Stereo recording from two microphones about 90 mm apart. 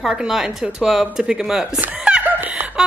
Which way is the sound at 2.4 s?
20° right (ahead or behind).